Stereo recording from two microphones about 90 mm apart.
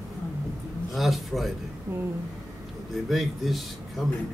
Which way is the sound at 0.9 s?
Centre (ahead or behind).